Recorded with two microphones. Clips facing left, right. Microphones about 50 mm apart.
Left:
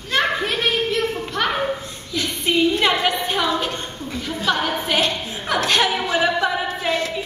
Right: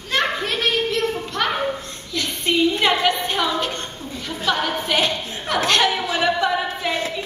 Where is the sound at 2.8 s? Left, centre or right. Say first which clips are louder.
Even; centre.